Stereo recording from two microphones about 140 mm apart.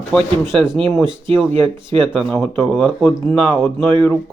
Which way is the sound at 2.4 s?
10° left (ahead or behind).